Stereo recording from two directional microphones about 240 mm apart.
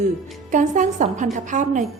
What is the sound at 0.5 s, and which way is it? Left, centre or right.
A woman's voice, right.